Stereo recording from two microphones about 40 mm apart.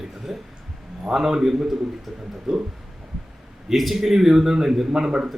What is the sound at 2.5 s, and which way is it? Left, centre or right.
Speech, right.